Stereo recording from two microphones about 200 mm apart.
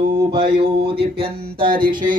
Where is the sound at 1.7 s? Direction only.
45° right (ahead or behind).